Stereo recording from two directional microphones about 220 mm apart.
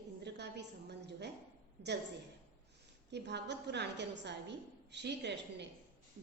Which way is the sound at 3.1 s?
50° right (ahead or behind).